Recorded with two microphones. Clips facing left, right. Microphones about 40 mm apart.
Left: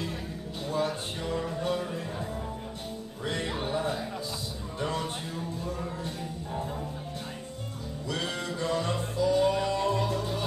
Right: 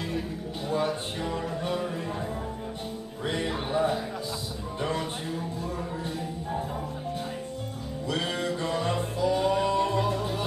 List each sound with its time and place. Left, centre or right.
0.7 s a sound: centre
1.3 s music: centre
3.3 s music: centre
8.1 s music: centre